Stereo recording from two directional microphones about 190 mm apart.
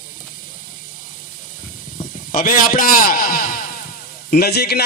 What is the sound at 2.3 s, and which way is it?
A man's voice, 45° left (ahead or behind).